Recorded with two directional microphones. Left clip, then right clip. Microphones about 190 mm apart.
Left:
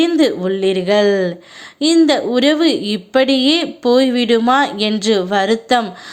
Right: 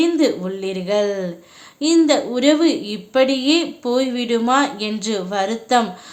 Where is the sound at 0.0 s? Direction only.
25° left (ahead or behind).